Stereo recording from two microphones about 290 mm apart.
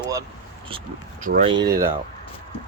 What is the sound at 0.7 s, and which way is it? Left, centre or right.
Speech, right.